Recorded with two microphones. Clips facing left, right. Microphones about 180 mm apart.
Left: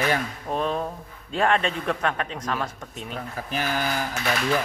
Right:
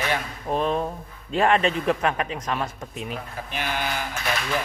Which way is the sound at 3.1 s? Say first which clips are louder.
Left 2 dB; 40° left (ahead or behind).